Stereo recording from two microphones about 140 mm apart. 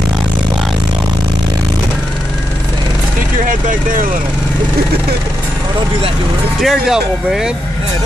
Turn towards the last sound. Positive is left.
turn(degrees=-5)  # may be behind; listen again after turning